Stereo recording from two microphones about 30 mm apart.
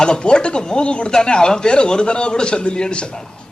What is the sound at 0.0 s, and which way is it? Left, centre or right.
A man's voice, left.